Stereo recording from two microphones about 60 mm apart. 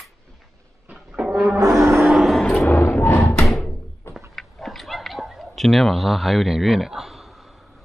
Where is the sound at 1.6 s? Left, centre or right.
Right.